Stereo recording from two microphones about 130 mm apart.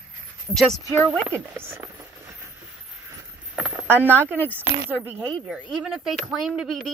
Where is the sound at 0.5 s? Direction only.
5° left (ahead or behind).